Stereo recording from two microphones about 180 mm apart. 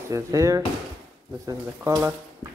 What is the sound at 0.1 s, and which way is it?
Speech, 15° right (ahead or behind).